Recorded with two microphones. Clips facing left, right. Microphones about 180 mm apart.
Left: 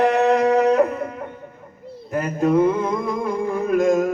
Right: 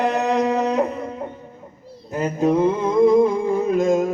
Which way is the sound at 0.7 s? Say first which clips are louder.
Left 3 dB; 25° right (ahead or behind).